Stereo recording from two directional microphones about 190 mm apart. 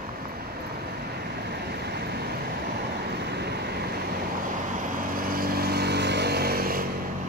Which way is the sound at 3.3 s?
60° right (ahead or behind).